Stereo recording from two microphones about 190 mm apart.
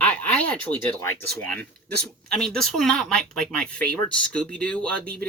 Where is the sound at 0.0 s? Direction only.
10° left (ahead or behind).